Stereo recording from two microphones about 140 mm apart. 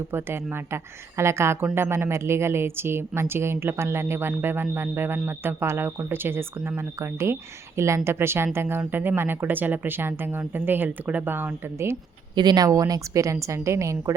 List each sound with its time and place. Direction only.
0.1 s a woman's voice: 15° right (ahead or behind)
12.3 s a woman's voice: 30° right (ahead or behind)